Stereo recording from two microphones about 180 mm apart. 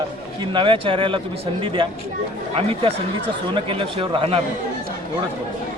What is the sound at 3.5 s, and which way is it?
Speech, 30° right (ahead or behind).